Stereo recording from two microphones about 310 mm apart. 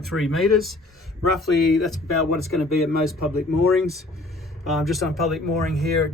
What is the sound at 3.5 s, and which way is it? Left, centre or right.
Speech, centre.